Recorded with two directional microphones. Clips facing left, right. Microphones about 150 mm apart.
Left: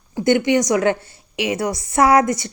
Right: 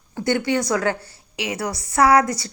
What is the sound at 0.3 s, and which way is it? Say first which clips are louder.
Speech: left 5 dB; 20° left (ahead or behind).